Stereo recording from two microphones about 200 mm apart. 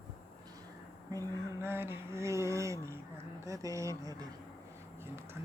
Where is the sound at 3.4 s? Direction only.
15° right (ahead or behind).